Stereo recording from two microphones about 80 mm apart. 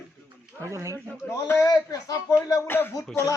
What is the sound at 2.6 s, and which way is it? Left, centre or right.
Speech, left.